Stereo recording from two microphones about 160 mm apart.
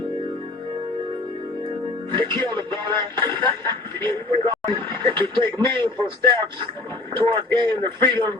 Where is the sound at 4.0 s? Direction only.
15° left (ahead or behind).